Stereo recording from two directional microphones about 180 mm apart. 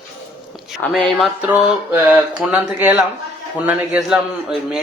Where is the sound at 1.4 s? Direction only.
10° right (ahead or behind).